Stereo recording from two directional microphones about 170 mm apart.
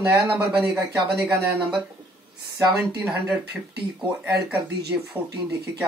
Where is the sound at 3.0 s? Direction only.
5° right (ahead or behind).